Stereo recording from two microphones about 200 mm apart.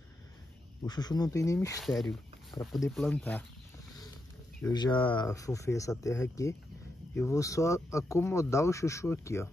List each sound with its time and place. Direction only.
0.8 s speech: 20° left (ahead or behind)
1.8 s speech: centre (ahead or behind)
2.5 s speech: 20° left (ahead or behind)
2.9 s speech: 5° left (ahead or behind)
4.7 s speech: 20° left (ahead or behind)